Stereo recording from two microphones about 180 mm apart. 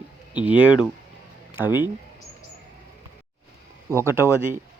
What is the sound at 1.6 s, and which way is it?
Speech, 25° left (ahead or behind).